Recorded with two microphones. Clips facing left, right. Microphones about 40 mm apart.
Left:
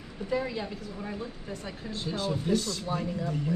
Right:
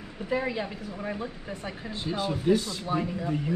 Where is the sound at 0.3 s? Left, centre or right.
Centre.